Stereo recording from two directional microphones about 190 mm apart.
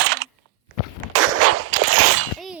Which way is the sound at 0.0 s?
60° right (ahead or behind).